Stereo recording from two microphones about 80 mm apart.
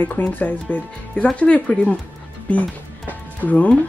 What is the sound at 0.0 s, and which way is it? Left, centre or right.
Speech, left.